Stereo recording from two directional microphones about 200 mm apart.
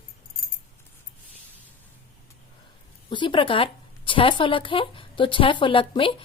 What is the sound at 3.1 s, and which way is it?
Speech, 25° left (ahead or behind).